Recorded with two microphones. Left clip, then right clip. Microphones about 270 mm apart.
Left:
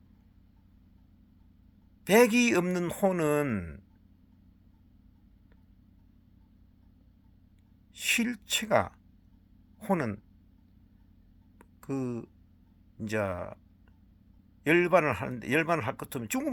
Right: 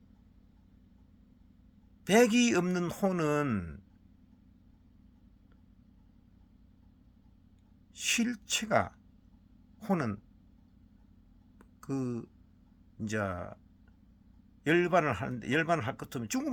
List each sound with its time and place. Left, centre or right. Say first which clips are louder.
2.1 s speech: left 3 dB; centre
7.9 s speech: left 3 dB; centre
11.8 s speech: left 2 dB; centre
14.6 s speech: left 3 dB; centre